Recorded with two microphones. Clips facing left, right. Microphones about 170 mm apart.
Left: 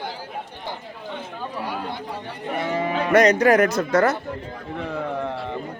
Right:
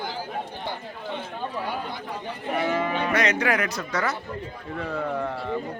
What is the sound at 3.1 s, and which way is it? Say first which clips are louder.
Speech: left 11 dB; 40° left (ahead or behind).